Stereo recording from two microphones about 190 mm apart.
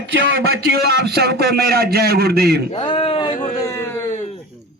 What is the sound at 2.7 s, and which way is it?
Speech, 30° left (ahead or behind).